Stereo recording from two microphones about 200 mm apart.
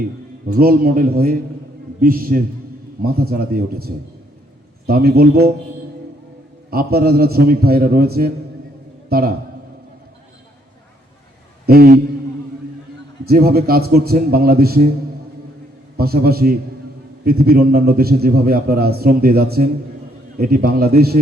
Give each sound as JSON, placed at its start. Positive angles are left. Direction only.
{"t": 0.4, "sound": "a man's voice", "side_deg": -50}
{"t": 6.7, "sound": "a man's voice", "side_deg": -50}
{"t": 11.6, "sound": "a man's voice", "side_deg": -50}
{"t": 13.2, "sound": "a man's voice", "side_deg": -50}
{"t": 16.0, "sound": "a man's voice", "side_deg": -50}